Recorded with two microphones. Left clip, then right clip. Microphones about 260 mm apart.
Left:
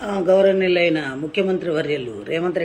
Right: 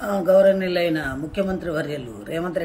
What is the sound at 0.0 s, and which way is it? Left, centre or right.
A man's voice, centre.